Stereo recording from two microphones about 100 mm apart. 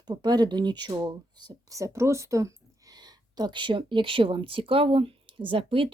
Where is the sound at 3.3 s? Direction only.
50° right (ahead or behind).